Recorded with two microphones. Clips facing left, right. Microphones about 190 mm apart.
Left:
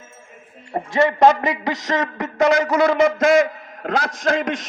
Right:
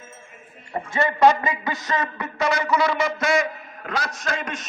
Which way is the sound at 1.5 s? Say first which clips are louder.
Left 4 dB; 85° left.